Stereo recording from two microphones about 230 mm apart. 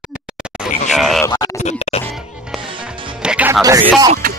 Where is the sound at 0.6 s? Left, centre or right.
Centre.